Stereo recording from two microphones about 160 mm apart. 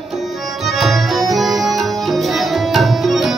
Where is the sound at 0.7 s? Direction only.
Centre (ahead or behind).